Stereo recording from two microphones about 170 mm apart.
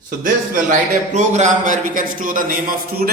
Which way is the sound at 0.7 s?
45° right (ahead or behind).